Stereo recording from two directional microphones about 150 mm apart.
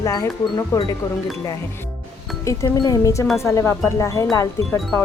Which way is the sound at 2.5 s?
25° left (ahead or behind).